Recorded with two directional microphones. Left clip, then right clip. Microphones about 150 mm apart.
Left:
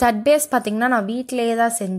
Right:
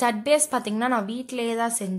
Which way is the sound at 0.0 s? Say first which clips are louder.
Left 5 dB; 35° left (ahead or behind).